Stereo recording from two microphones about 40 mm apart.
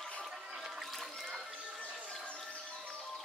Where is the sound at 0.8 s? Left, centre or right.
Centre.